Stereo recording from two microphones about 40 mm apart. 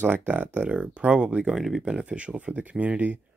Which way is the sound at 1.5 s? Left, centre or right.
Centre.